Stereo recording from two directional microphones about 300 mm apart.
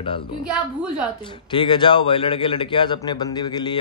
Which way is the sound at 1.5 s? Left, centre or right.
Centre.